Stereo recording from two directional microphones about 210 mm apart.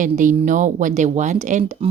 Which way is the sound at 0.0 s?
35° right (ahead or behind).